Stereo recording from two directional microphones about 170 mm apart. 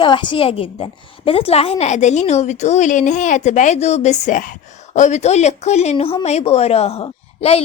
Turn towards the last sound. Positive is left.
turn(degrees=35)  # may be behind; listen again after turning